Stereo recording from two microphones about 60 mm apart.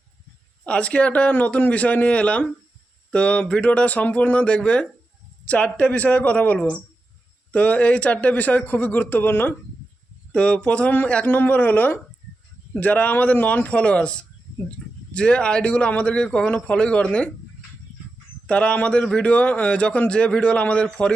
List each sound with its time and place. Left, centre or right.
0.6 s speech: left
10.3 s speech: centre
11.3 s speech: left
18.4 s speech: centre